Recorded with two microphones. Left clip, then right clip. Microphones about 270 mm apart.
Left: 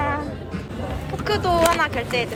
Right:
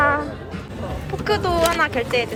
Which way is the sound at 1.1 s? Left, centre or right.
Centre.